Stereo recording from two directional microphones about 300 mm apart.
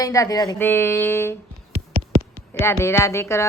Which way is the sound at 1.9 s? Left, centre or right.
Right.